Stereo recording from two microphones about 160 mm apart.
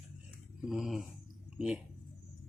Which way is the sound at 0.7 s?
Centre (ahead or behind).